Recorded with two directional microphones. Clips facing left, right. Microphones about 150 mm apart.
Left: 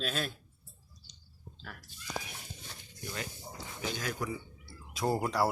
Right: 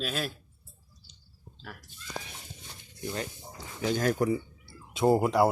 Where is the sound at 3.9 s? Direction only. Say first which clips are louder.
Right 12 dB; 45° right (ahead or behind).